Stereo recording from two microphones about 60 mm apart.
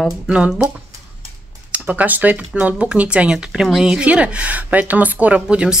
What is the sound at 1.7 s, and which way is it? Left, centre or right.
Speech, right.